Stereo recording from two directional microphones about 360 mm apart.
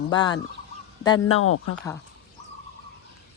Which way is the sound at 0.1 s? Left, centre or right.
Centre.